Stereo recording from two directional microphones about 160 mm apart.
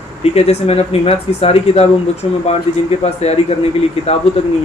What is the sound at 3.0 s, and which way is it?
Speech, 40° left (ahead or behind).